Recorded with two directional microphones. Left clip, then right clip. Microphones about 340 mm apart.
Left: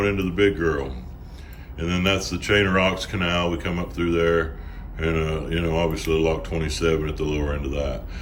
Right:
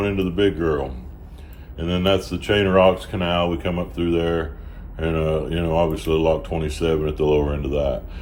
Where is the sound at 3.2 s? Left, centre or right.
Centre.